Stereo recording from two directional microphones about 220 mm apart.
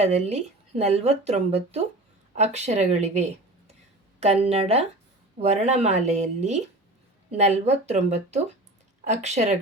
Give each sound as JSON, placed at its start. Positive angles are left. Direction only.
{"t": 0.0, "sound": "speech", "side_deg": -30}